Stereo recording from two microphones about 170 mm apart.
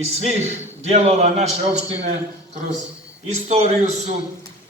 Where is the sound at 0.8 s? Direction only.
40° right (ahead or behind).